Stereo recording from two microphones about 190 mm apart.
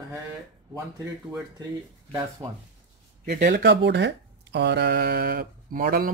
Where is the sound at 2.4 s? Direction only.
25° right (ahead or behind).